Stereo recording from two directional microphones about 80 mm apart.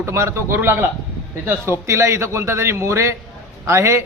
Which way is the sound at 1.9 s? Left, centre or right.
Right.